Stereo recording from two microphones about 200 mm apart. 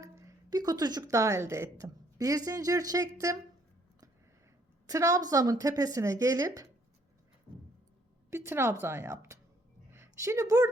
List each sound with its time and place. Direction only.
0.0 s a woman's voice: 15° right (ahead or behind)
4.9 s a woman's voice: 15° right (ahead or behind)
8.3 s a woman's voice: 15° right (ahead or behind)